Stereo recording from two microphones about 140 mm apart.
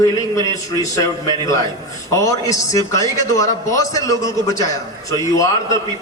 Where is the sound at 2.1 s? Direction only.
25° left (ahead or behind).